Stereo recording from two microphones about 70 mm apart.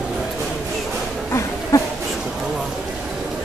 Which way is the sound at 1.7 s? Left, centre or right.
Left.